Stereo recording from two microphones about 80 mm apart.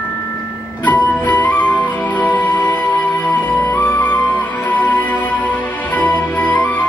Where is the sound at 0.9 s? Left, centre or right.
Centre.